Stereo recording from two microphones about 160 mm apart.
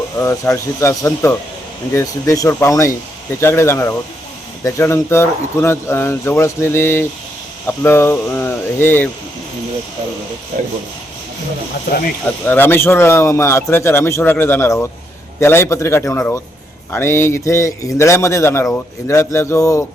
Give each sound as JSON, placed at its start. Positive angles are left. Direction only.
{"t": 0.2, "sound": "a man's voice", "side_deg": 20}
{"t": 12.5, "sound": "a man's voice", "side_deg": 15}